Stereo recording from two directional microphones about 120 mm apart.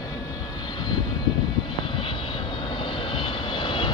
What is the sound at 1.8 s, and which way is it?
Vehicle, 45° left (ahead or behind).